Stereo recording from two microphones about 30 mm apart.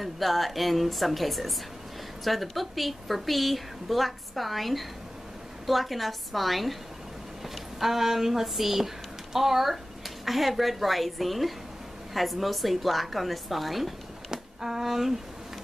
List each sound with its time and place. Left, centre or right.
0.0 s a woman's voice: centre
14.3 s speech: centre